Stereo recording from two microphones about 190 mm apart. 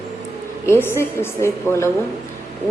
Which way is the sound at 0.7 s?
15° left (ahead or behind).